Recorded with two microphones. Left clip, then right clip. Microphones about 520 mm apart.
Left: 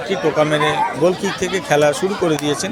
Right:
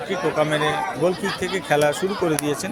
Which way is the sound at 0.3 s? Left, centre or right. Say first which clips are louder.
Left 5 dB; right.